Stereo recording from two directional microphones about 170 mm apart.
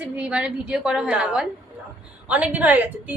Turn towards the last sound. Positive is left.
turn(degrees=-10)  # may be behind; listen again after turning